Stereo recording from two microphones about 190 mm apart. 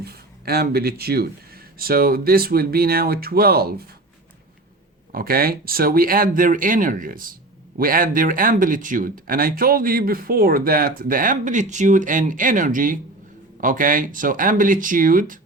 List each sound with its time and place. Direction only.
0.0 s speech: 55° right (ahead or behind)
5.1 s speech: 50° right (ahead or behind)